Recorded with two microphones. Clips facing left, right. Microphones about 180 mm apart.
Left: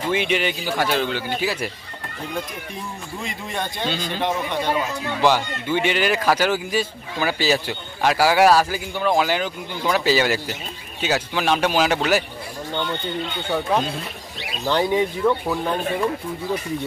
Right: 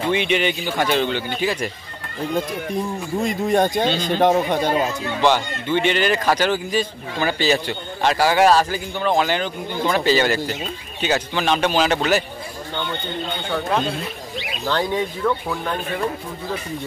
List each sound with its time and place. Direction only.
0.1 s speech: 5° left (ahead or behind)
2.3 s speech: 40° right (ahead or behind)
3.9 s speech: 5° left (ahead or behind)
4.2 s speech: 45° right (ahead or behind)
5.2 s speech: 5° left (ahead or behind)
14.7 s speech: 15° left (ahead or behind)